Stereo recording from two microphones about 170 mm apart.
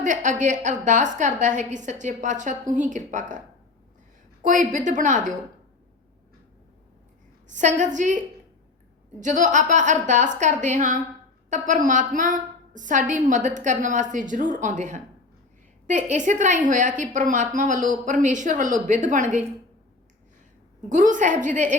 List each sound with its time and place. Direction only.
0.0 s a woman's voice: 45° right (ahead or behind)
4.4 s a woman's voice: 45° right (ahead or behind)
7.4 s a woman's voice: 45° right (ahead or behind)
9.2 s a woman's voice: 45° right (ahead or behind)
20.9 s a woman's voice: 50° right (ahead or behind)